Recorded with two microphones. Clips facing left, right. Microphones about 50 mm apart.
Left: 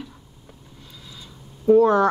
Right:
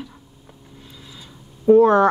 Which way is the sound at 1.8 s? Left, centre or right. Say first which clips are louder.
Right 3 dB; right.